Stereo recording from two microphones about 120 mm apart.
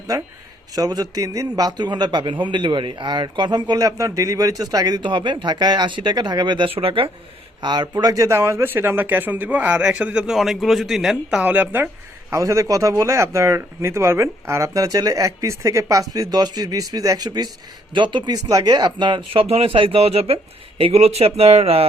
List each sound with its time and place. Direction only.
0.7 s a man's voice: 30° right (ahead or behind); by 7.1 s 50° right (ahead or behind)
7.6 s speech: 35° right (ahead or behind); by 11.9 s 15° right (ahead or behind)
12.3 s speech: 25° right (ahead or behind); by 21.8 s 55° right (ahead or behind)